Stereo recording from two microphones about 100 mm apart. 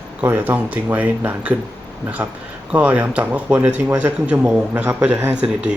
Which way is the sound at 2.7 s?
15° right (ahead or behind).